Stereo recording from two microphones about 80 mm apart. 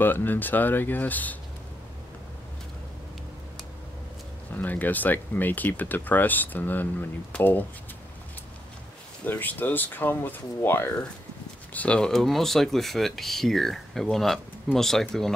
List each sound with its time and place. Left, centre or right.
0.0 s speech: left
4.6 s speech: left
9.2 s speech: left
12.0 s speech: centre